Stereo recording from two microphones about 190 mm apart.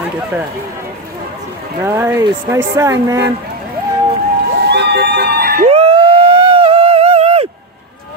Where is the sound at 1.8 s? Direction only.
10° right (ahead or behind).